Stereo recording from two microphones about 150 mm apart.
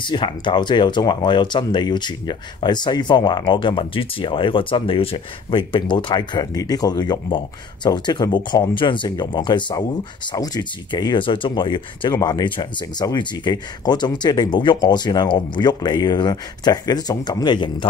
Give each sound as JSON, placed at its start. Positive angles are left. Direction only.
{"t": 0.0, "sound": "speech", "side_deg": 30}